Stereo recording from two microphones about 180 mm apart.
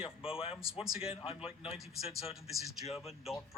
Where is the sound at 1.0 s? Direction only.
30° left (ahead or behind).